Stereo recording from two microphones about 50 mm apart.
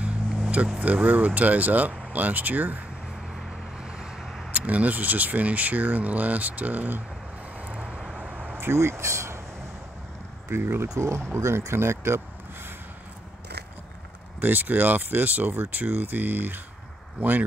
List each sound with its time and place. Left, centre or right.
0.0 s a sound: right
0.7 s speech: right
3.8 s vehicle: centre
4.2 s a sound: centre
4.5 s speech: right
7.6 s vehicle: centre
8.5 s speech: right
10.6 s speech: right
11.0 s speech: right
14.4 s speech: right